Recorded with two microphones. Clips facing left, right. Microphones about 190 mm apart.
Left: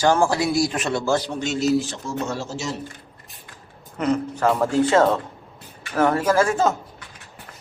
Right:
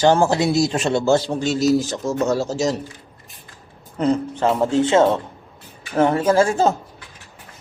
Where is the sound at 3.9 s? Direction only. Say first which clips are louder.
Right 3 dB; 30° right (ahead or behind).